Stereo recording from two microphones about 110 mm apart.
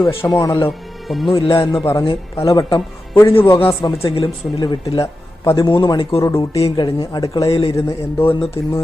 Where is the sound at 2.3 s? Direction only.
35° left (ahead or behind).